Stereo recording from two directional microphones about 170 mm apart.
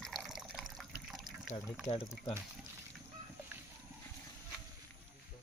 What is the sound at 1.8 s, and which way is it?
Speech, 25° left (ahead or behind).